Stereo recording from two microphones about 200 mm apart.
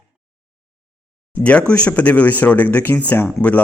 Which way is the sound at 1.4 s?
5° left (ahead or behind).